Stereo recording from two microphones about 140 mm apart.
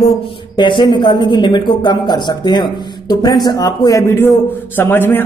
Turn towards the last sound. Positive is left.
turn(degrees=15)  # may be behind; listen again after turning